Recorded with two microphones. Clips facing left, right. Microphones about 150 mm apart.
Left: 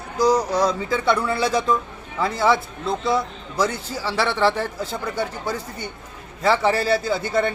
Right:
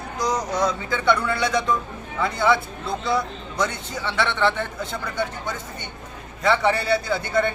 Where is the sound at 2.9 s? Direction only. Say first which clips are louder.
Left 2 dB; centre (ahead or behind).